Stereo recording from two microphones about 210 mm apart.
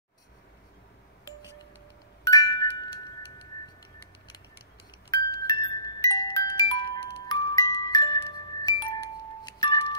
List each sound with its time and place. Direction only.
2.2 s music: 20° left (ahead or behind)
5.1 s music: 20° left (ahead or behind)